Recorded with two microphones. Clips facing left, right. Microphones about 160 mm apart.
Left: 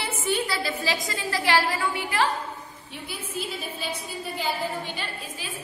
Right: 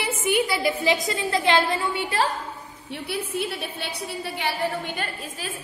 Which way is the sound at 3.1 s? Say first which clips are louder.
Right 5 dB; 70° right (ahead or behind).